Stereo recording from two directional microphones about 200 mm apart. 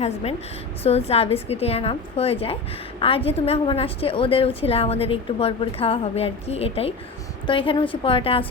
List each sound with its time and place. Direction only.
0.0 s a woman's voice: 30° left (ahead or behind)